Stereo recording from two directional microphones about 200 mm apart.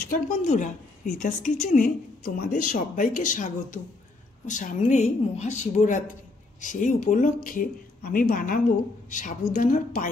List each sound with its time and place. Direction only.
0.0 s a woman's voice: 40° left (ahead or behind)